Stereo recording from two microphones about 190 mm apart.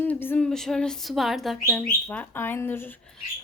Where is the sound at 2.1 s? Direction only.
10° left (ahead or behind).